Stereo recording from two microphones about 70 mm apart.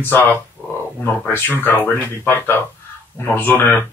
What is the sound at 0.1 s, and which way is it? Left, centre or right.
A man's voice, left.